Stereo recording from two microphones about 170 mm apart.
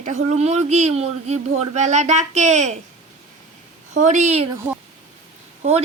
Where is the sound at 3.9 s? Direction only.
45° right (ahead or behind).